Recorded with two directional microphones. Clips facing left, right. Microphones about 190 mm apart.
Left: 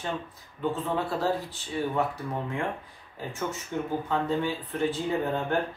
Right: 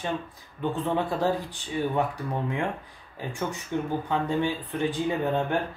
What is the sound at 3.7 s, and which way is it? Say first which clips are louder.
Speech: right 2 dB; 20° right (ahead or behind).